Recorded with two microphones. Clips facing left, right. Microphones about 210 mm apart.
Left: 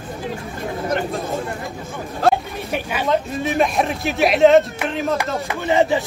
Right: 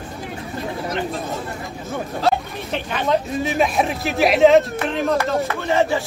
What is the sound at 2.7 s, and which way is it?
Speech, 5° left (ahead or behind).